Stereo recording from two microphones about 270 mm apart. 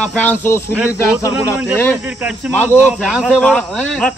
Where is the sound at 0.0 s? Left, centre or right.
Centre.